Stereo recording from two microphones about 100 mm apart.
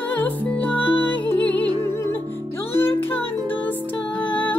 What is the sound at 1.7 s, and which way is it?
Music, 50° right (ahead or behind).